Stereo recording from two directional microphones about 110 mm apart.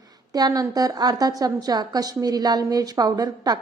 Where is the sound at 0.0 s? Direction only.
35° right (ahead or behind).